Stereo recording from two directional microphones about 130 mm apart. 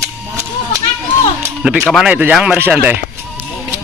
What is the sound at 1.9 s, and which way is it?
Speech, 5° right (ahead or behind).